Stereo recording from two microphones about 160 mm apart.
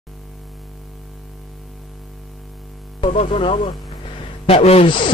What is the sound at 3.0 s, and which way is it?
Speech, 35° left (ahead or behind).